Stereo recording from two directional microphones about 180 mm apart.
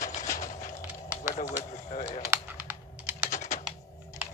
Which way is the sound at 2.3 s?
10° right (ahead or behind).